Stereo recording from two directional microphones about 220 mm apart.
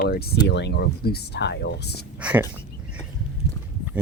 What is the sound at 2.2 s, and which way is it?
Speech, 5° right (ahead or behind).